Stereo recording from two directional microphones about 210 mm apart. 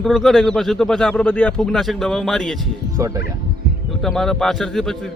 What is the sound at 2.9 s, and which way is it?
Speech, 15° right (ahead or behind).